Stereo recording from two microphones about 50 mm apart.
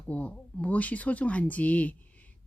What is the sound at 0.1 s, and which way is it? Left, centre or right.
Speech, left.